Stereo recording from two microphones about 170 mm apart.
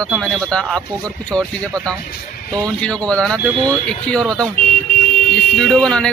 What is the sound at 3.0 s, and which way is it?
Speech, 5° left (ahead or behind).